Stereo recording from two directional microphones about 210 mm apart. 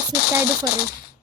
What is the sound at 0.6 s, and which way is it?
Speech, 45° left (ahead or behind).